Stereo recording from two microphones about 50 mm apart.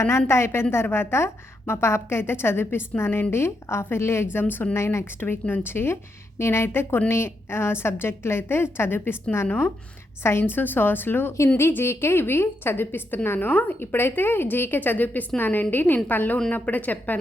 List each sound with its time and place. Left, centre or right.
0.0 s a woman's voice: left
4.7 s speech: left
5.2 s a woman's voice: left
13.9 s a woman's voice: left